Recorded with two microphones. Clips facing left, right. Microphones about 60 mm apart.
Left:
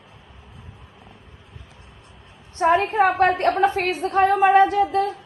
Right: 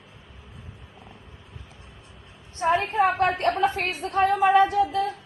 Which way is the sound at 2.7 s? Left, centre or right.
Left.